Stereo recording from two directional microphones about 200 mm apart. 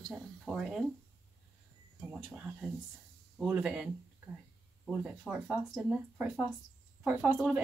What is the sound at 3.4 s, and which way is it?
Speech, 5° right (ahead or behind).